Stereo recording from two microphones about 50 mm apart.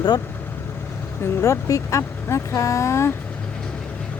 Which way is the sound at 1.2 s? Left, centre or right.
Left.